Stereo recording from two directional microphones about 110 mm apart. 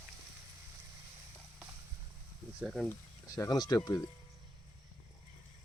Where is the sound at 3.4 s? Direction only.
35° left (ahead or behind).